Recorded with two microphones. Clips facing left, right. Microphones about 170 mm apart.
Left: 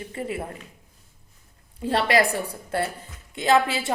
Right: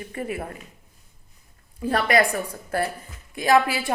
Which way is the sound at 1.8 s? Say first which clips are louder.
Even; 25° left (ahead or behind).